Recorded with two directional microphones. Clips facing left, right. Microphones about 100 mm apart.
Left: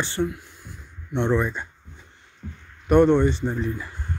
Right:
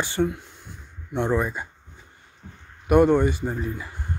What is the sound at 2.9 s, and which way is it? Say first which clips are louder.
Speech: left 1 dB; 10° right (ahead or behind).